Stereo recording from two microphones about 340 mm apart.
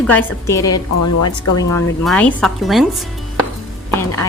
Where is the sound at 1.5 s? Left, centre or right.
Centre.